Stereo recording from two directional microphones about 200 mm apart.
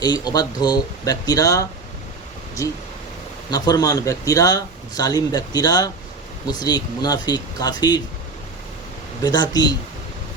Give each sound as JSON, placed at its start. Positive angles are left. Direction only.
{"t": 0.0, "sound": "speech", "side_deg": 20}
{"t": 9.2, "sound": "speech", "side_deg": 20}